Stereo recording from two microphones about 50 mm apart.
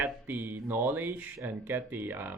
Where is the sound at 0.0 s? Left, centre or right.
Right.